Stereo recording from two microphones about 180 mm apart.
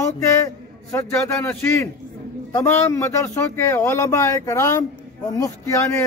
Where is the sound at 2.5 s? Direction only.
15° left (ahead or behind).